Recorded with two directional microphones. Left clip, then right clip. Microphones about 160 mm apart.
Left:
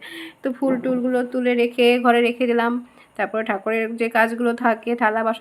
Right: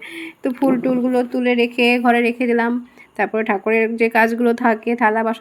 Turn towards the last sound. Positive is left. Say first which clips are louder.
# right 3 dB
turn(degrees=-10)  # may be behind; listen again after turning